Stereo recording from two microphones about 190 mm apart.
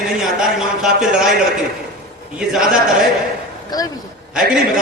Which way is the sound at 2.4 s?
Centre (ahead or behind).